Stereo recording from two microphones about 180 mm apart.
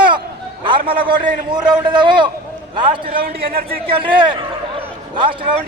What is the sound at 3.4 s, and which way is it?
Speech, 55° right (ahead or behind).